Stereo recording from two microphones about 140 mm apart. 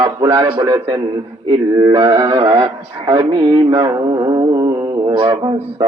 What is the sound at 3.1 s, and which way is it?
Music, 35° right (ahead or behind).